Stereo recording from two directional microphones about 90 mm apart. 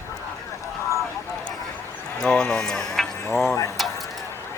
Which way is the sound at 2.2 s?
10° left (ahead or behind).